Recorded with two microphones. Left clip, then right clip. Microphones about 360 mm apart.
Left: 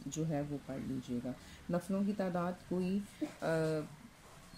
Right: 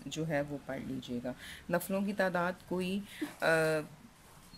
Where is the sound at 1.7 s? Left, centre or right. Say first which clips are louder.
Right 5 dB; right.